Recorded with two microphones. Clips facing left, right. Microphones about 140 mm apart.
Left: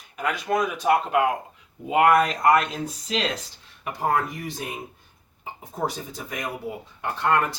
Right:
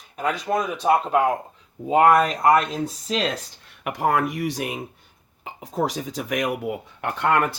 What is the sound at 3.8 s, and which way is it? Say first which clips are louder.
Speech: right 3 dB; 80° right.